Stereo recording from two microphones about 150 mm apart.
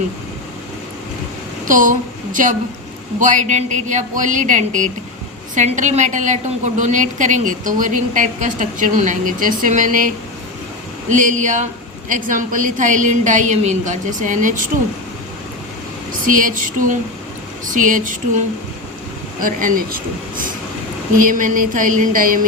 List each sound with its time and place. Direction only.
1.6 s a woman's voice: 60° right (ahead or behind)
11.1 s a woman's voice: 60° right (ahead or behind)
16.2 s a woman's voice: 60° right (ahead or behind)
21.2 s a woman's voice: 60° right (ahead or behind)